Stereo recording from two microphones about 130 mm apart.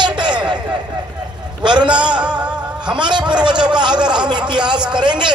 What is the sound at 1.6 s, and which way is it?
Speech, 35° right (ahead or behind).